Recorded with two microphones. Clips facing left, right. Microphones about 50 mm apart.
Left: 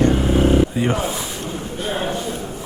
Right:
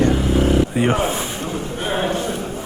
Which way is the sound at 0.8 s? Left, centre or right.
Right.